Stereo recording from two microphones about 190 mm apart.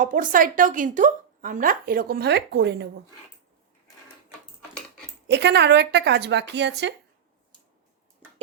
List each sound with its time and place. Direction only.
0.0 s a woman's voice: 45° right (ahead or behind); by 2.9 s 65° right (ahead or behind)
5.3 s a woman's voice: 65° right (ahead or behind)